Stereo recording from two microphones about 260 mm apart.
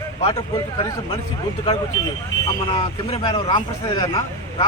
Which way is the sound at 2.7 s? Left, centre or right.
Centre.